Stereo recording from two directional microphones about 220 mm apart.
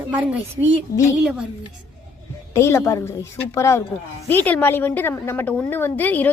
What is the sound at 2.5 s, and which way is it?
A woman's voice, 10° left (ahead or behind).